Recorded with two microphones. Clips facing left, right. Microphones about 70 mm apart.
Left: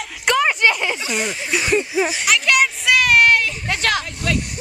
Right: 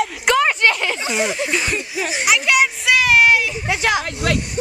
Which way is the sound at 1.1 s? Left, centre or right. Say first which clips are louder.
Right 2 dB; centre.